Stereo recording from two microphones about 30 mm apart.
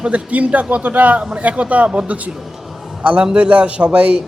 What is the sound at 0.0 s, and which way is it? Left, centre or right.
A man's voice, right.